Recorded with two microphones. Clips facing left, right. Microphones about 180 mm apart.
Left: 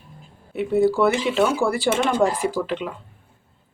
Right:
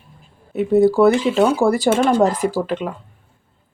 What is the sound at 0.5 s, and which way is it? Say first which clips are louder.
Speech: right 5 dB; 40° right (ahead or behind).